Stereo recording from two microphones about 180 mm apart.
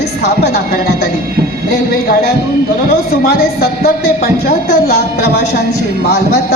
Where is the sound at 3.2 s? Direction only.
60° left (ahead or behind).